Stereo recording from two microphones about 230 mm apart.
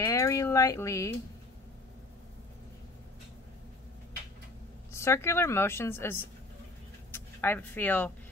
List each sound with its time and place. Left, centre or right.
0.0 s speech: centre
4.9 s a woman's voice: centre